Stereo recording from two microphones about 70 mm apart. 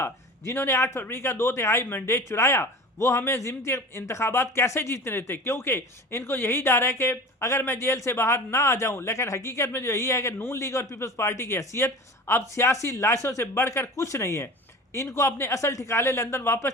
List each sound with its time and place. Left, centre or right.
0.0 s a man's voice: left
1.8 s a man's voice: left
2.1 s a man's voice: left